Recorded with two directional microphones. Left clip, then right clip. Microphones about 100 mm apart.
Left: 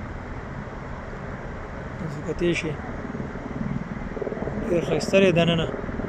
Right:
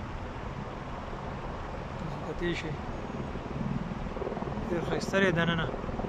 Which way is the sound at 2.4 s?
5° left (ahead or behind).